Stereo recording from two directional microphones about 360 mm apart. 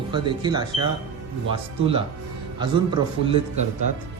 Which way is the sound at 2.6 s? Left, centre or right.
Centre.